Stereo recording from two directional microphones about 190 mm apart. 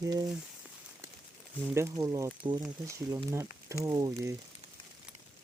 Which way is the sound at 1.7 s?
15° right (ahead or behind).